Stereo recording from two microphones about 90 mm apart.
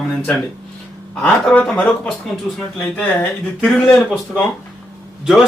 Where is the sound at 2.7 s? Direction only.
20° left (ahead or behind).